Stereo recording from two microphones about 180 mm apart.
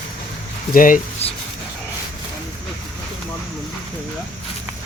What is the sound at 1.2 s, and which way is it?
Speech, 35° left (ahead or behind).